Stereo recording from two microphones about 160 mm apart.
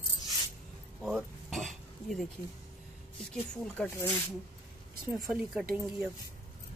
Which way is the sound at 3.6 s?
10° left (ahead or behind).